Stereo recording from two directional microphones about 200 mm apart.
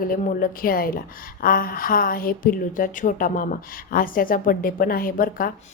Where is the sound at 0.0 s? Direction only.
45° left (ahead or behind).